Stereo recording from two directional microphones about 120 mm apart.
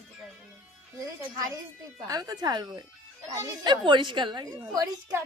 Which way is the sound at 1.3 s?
30° right (ahead or behind).